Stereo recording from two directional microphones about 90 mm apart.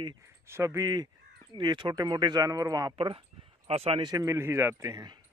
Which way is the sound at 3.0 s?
85° right.